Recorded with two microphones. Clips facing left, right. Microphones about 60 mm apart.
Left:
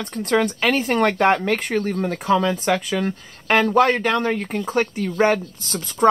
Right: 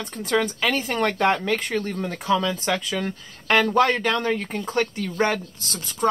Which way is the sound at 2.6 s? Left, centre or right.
Left.